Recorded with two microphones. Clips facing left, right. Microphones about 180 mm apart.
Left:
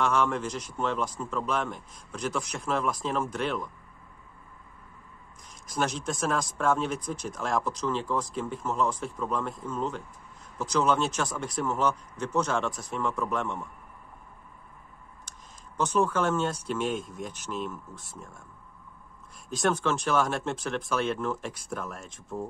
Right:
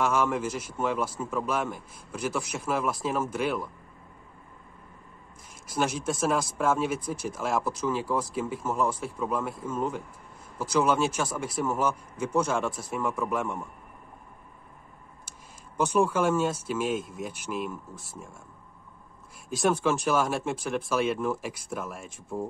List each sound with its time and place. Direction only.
0.0 s speech: 10° right (ahead or behind)
5.7 s speech: 10° right (ahead or behind)
15.3 s a sound: 10° right (ahead or behind)
15.8 s speech: 10° right (ahead or behind)
19.5 s speech: 10° right (ahead or behind)